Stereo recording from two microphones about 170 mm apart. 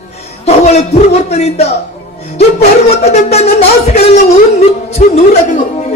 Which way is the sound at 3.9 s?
40° left (ahead or behind).